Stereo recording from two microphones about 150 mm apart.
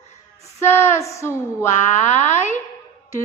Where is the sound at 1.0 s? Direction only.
20° left (ahead or behind).